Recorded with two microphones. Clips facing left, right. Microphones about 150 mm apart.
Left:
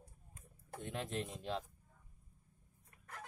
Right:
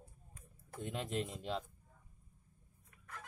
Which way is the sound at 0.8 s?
10° right (ahead or behind).